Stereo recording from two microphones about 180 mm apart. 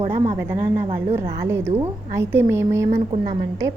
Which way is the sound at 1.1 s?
15° right (ahead or behind).